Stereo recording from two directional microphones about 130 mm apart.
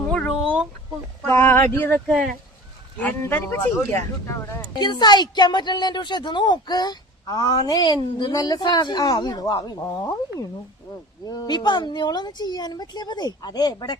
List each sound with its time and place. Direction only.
0.1 s a sound: 10° left (ahead or behind)
1.3 s a sound: 20° left (ahead or behind)
1.7 s speech: 15° left (ahead or behind)
2.0 s speech: centre (ahead or behind)
3.0 s speech: 15° left (ahead or behind)
4.7 s speech: 35° left (ahead or behind)
11.3 s speech: 30° left (ahead or behind)